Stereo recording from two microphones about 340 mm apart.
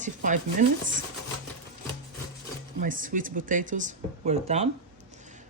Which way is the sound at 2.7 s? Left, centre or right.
Right.